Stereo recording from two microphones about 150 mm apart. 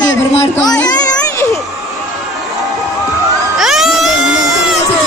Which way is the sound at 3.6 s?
Centre (ahead or behind).